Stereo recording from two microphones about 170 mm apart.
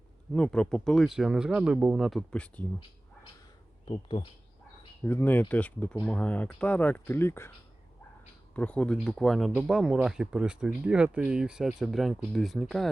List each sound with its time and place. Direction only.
0.3 s speech: 5° left (ahead or behind)
3.8 s speech: 30° left (ahead or behind)
5.0 s speech: 10° left (ahead or behind)
8.5 s speech: 5° left (ahead or behind)